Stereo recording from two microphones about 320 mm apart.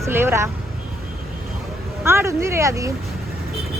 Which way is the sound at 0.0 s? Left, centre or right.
Centre.